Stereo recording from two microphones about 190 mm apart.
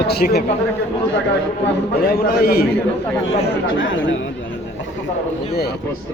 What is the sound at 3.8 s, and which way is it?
Speech, 80° left.